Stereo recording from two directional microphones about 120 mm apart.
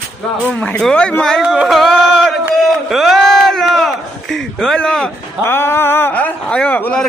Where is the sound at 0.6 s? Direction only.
5° left (ahead or behind).